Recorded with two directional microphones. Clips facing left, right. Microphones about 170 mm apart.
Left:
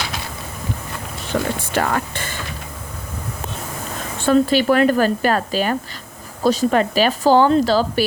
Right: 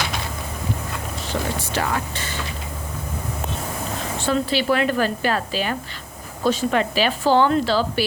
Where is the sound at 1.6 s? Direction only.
55° left (ahead or behind).